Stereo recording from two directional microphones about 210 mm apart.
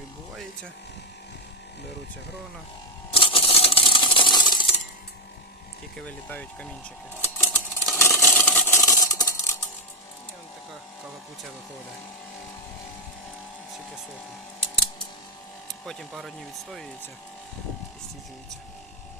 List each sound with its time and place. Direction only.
3.1 s coin: 25° left (ahead or behind)
6.1 s speech: 5° left (ahead or behind)
7.2 s a sound: 10° left (ahead or behind)
15.9 s speech: centre (ahead or behind)